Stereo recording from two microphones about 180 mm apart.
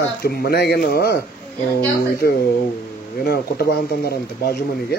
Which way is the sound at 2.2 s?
60° left (ahead or behind).